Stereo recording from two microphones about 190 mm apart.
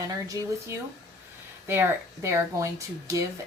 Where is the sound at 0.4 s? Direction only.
20° right (ahead or behind).